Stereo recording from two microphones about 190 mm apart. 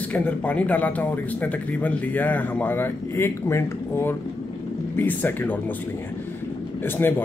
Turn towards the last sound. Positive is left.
turn(degrees=10)  # may be behind; listen again after turning